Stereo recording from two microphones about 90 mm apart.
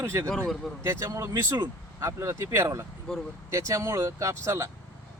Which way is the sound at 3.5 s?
35° right (ahead or behind).